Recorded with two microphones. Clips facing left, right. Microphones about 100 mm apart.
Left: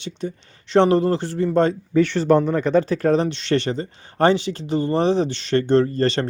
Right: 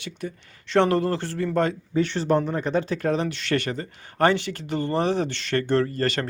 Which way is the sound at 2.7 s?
40° left (ahead or behind).